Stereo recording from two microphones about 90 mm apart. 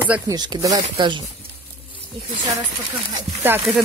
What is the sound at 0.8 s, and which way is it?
Speech, 75° right (ahead or behind).